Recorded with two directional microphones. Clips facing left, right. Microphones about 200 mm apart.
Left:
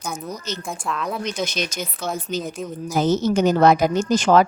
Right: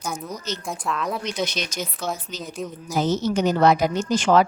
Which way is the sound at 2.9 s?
50° left (ahead or behind).